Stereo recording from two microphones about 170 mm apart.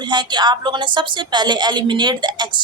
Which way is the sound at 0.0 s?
25° right (ahead or behind).